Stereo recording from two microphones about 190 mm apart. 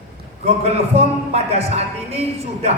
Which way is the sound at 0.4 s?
35° right (ahead or behind).